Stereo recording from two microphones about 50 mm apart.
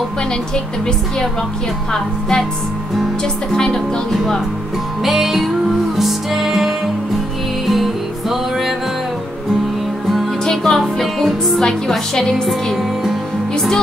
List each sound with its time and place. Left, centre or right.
1.9 s a woman's voice: centre
3.5 s a woman's voice: centre
5.0 s music: centre
10.4 s music: centre
11.6 s a woman's voice: centre
13.0 s music: centre